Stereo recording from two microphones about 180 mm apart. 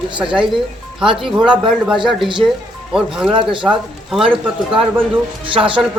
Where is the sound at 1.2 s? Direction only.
Centre (ahead or behind).